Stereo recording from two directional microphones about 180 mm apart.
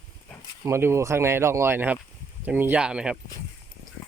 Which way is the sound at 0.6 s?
15° right (ahead or behind).